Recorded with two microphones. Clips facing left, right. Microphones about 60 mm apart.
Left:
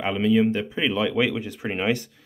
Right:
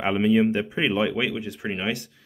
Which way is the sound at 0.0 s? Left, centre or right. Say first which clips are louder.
Even; centre.